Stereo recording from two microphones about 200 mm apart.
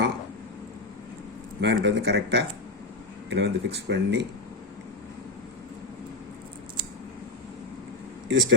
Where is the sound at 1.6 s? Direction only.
60° right (ahead or behind).